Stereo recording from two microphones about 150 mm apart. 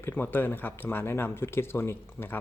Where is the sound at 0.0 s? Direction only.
15° left (ahead or behind).